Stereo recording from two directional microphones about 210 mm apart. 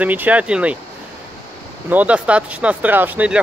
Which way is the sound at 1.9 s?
5° right (ahead or behind).